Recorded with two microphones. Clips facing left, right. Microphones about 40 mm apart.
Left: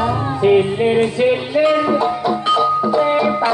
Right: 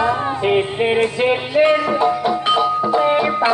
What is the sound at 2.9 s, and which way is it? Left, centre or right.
Music, right.